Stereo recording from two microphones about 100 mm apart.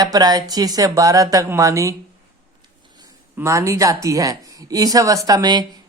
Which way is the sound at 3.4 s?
30° right (ahead or behind).